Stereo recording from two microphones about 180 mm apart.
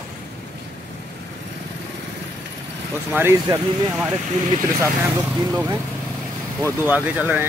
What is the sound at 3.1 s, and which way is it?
Speech, 15° right (ahead or behind).